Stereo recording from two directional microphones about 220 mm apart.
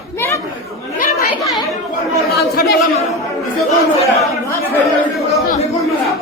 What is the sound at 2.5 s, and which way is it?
Chatter, 45° left (ahead or behind).